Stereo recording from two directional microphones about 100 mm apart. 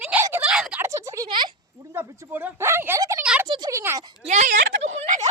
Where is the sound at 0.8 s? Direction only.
30° right (ahead or behind).